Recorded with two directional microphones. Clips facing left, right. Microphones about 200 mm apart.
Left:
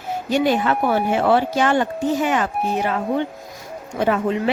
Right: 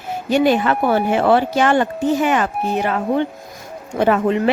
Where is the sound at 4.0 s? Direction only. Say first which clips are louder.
Right 4 dB; 65° right (ahead or behind).